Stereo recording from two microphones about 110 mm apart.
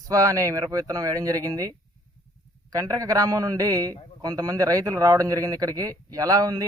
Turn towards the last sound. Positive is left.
turn(degrees=-35)  # may be behind; listen again after turning